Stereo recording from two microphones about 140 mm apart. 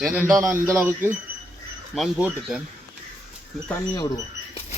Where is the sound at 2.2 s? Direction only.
5° right (ahead or behind).